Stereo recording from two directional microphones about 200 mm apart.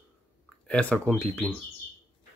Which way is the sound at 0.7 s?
5° left (ahead or behind).